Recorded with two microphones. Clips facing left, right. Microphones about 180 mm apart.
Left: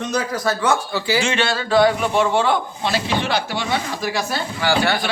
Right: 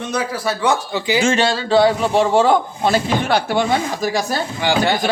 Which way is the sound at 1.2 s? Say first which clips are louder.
Right 4 dB; 40° right (ahead or behind).